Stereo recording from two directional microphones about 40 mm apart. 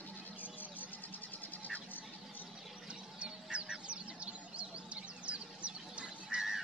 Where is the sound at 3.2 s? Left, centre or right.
Right.